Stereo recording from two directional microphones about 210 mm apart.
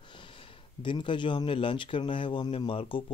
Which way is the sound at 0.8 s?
20° left (ahead or behind).